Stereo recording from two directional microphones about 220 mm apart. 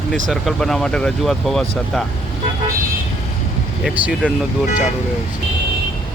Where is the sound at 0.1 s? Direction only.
Centre (ahead or behind).